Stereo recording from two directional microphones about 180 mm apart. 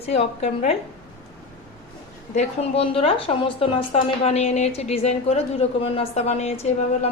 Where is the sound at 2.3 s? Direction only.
30° left (ahead or behind).